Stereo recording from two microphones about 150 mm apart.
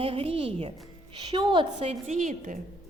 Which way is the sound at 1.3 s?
30° right (ahead or behind).